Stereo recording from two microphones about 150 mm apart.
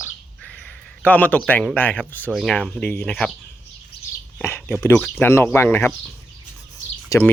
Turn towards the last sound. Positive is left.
turn(degrees=15)  # may be behind; listen again after turning